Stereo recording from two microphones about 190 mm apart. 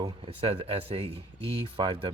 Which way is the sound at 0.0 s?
30° right (ahead or behind).